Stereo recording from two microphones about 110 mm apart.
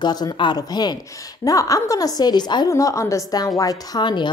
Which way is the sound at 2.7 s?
30° left (ahead or behind).